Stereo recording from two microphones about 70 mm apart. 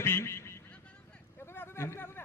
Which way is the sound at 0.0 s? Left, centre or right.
Left.